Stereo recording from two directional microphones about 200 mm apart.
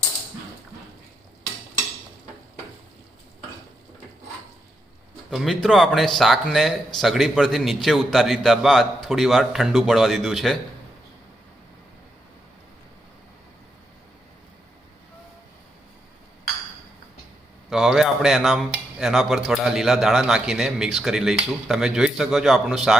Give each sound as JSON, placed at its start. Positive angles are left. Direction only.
{"t": 5.3, "sound": "speech", "side_deg": 0}
{"t": 17.7, "sound": "speech", "side_deg": 0}